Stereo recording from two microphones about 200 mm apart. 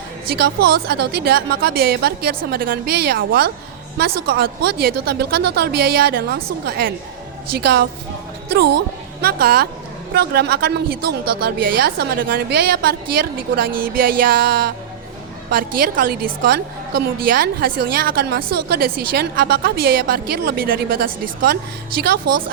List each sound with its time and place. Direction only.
0.3 s a woman's voice: 50° right (ahead or behind)
9.2 s a woman's voice: 50° right (ahead or behind)